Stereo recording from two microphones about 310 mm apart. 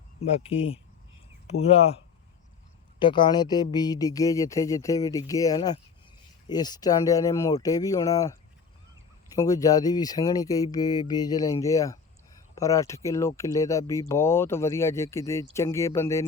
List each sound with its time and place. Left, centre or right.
0.2 s speech: centre
3.0 s speech: centre